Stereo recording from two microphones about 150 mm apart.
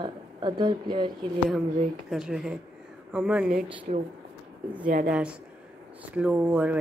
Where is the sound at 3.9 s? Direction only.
60° right (ahead or behind).